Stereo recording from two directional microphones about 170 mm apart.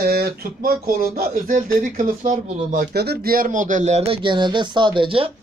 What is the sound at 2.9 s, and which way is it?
Speech, 70° right (ahead or behind).